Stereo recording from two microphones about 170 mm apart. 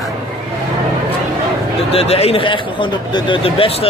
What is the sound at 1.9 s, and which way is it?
A man's voice, 35° left (ahead or behind).